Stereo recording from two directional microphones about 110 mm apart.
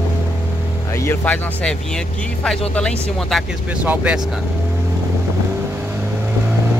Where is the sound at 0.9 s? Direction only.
25° left (ahead or behind).